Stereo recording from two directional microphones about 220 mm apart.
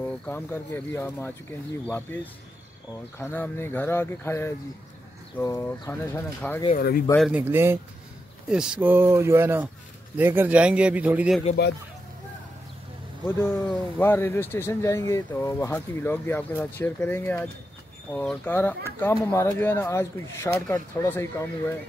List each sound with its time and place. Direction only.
0.0 s speech: 10° left (ahead or behind)
3.2 s speech: 10° left (ahead or behind)
6.7 s speech: 45° left (ahead or behind)
7.2 s speech: 5° right (ahead or behind)
13.4 s speech: 10° left (ahead or behind)